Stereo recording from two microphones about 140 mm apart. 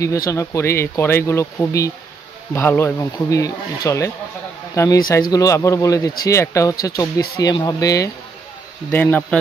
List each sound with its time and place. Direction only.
0.3 s speech: 20° left (ahead or behind)
8.9 s speech: 10° left (ahead or behind)